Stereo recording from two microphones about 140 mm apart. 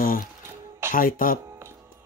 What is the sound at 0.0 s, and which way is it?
Music, 85° left.